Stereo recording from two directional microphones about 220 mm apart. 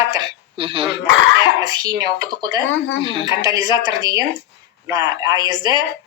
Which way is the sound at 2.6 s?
60° left (ahead or behind).